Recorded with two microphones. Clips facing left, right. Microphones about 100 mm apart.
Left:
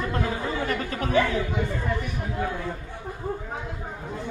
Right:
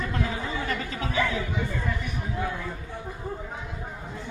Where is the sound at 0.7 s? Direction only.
45° left (ahead or behind).